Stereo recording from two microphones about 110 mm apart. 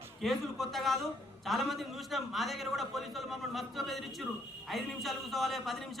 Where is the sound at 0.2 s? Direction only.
Centre (ahead or behind).